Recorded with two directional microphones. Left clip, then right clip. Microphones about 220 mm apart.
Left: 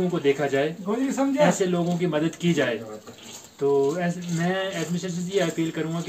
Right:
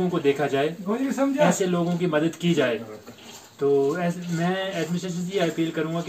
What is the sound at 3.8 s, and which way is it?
Speech, 15° left (ahead or behind).